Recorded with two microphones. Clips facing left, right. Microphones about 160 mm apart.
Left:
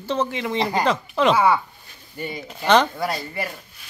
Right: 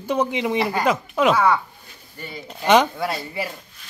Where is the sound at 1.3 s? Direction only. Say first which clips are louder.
Left 2 dB; 10° left (ahead or behind).